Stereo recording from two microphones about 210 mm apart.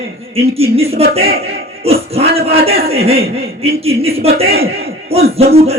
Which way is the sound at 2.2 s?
45° right (ahead or behind).